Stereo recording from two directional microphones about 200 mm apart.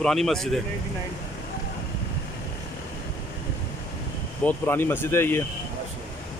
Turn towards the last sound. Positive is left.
turn(degrees=10)  # may be behind; listen again after turning